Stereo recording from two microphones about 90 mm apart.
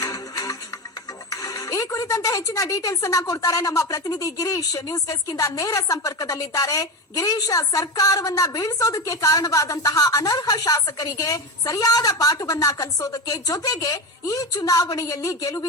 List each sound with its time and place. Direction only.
0.0 s music: 40° left (ahead or behind)
1.3 s speech: 40° left (ahead or behind)